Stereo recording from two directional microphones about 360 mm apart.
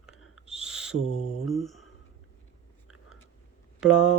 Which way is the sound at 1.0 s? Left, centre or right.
Centre.